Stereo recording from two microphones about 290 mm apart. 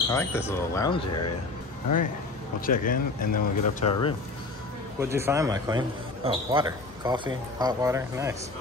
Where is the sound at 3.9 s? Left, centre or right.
Centre.